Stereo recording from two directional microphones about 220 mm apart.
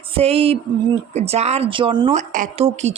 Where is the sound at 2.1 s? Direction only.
35° right (ahead or behind).